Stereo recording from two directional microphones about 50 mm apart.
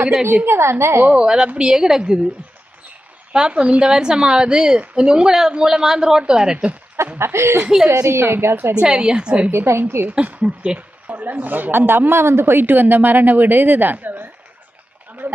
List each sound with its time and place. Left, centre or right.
0.4 s a woman's voice: right
1.1 s speech: centre
3.3 s speech: centre
7.0 s a woman's voice: right
8.8 s a woman's voice: centre
9.5 s a woman's voice: right
10.1 s a woman's voice: right